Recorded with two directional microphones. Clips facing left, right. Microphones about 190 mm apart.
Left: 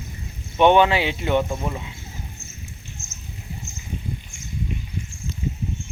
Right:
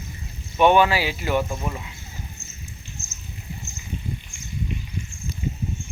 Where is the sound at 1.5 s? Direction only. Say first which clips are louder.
Left 2 dB; 5° left (ahead or behind).